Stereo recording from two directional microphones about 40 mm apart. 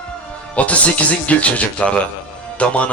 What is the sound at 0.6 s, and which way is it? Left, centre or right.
Speech, left.